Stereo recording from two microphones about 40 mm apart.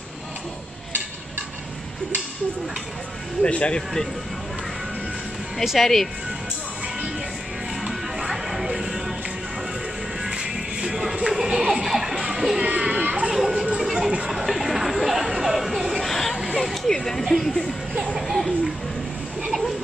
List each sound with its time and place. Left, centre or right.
3.4 s speech: left
5.6 s speech: centre
7.8 s music: centre
10.3 s music: centre
11.2 s a sound: centre
12.3 s music: centre
12.6 s children playing: right
13.3 s children playing: centre
13.7 s a sound: centre
16.9 s speech: centre